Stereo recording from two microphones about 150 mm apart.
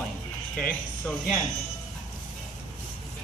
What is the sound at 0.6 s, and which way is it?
Speech, 5° left (ahead or behind).